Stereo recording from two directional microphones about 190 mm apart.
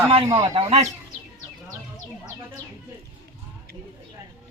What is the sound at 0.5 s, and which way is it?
Speech, 35° right (ahead or behind).